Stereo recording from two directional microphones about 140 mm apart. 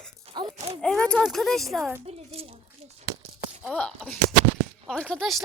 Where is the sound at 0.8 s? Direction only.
5° left (ahead or behind).